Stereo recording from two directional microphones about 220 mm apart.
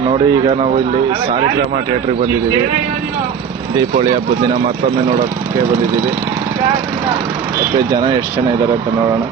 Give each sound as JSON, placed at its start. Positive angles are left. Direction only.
{"t": 0.1, "sound": "a man's voice", "side_deg": -25}